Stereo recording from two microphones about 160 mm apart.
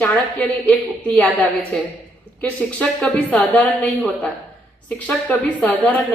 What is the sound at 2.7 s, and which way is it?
A woman's voice, 10° left (ahead or behind).